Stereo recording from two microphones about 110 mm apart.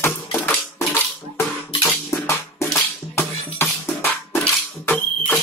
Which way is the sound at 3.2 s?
20° left (ahead or behind).